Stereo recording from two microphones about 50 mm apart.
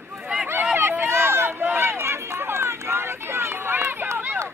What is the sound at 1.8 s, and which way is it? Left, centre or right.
Run, right.